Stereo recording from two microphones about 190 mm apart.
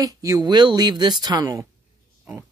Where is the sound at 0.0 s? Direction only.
20° right (ahead or behind).